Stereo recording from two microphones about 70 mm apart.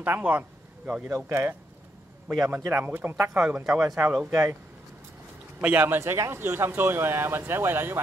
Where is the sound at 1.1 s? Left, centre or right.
Right.